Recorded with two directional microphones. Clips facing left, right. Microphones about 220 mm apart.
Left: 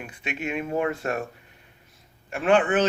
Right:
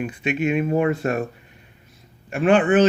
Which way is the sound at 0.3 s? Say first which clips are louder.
Right 8 dB; 15° right (ahead or behind).